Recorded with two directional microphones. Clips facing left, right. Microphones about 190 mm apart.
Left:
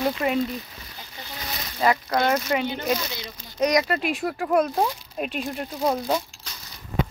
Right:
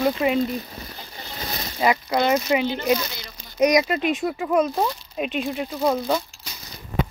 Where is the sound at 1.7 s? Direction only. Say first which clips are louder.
Right 1 dB; 10° right (ahead or behind).